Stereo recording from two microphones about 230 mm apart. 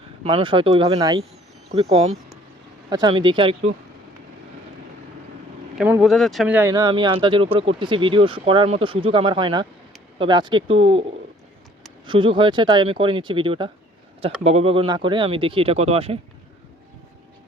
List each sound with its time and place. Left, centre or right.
0.3 s speech: right
1.7 s speech: right
5.7 s speech: centre; by 11.0 s right
12.0 s speech: right